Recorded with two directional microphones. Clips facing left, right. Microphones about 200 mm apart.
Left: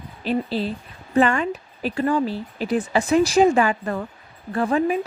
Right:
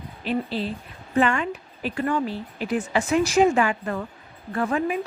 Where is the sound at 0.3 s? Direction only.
35° left (ahead or behind).